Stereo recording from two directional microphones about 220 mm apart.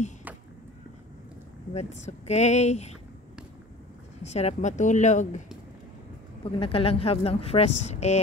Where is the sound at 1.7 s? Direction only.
30° left (ahead or behind).